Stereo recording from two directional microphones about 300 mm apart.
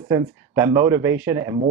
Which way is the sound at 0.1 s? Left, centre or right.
Centre.